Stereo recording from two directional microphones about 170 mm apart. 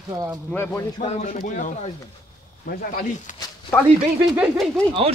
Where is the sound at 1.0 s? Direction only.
50° left (ahead or behind).